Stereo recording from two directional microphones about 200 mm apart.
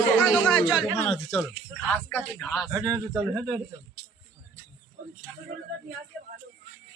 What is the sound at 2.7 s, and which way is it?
Speech, 15° right (ahead or behind).